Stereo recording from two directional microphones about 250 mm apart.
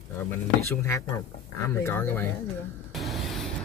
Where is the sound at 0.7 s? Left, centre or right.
Centre.